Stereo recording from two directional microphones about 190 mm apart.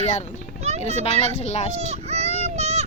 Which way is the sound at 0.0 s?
35° left (ahead or behind).